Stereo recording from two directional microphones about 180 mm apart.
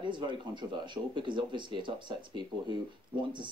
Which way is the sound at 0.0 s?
25° right (ahead or behind).